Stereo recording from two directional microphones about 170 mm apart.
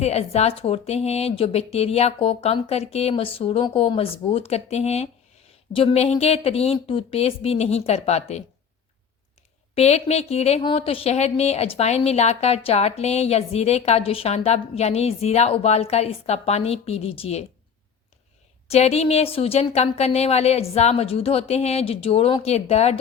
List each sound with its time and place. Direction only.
0.0 s a woman's voice: 40° left (ahead or behind)
9.7 s a woman's voice: 40° left (ahead or behind)
18.7 s a woman's voice: 40° left (ahead or behind)